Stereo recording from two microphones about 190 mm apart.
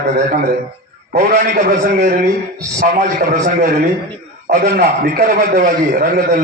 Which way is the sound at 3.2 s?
45° right (ahead or behind).